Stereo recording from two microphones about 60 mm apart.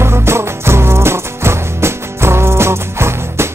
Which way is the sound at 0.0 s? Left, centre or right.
Right.